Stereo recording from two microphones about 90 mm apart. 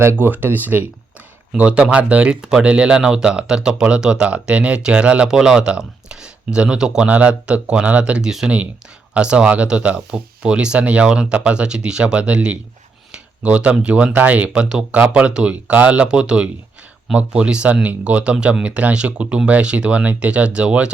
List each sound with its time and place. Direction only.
0.0 s speech: 25° right (ahead or behind)